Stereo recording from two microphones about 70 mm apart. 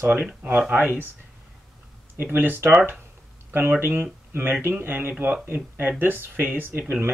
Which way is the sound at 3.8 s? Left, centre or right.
Right.